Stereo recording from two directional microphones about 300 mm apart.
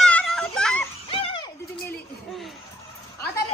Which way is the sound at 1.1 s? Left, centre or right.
Centre.